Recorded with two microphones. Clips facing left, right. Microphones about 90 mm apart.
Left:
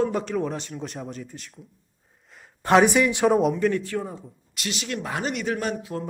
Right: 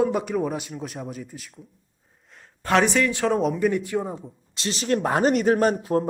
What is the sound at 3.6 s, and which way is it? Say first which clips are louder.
Speech: right 1 dB; 10° right (ahead or behind).